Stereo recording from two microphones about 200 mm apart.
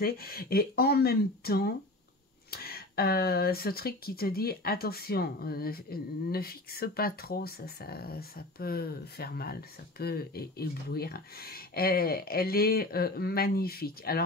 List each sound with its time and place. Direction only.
0.0 s speech: 50° left (ahead or behind)